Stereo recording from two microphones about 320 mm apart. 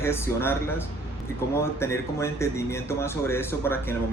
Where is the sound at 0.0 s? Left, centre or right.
Centre.